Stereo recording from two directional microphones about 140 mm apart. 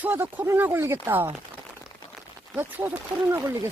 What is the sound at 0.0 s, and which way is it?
Speech, 15° right (ahead or behind).